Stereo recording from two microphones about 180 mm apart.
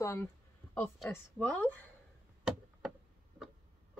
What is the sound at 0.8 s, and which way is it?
Speech, 5° left (ahead or behind).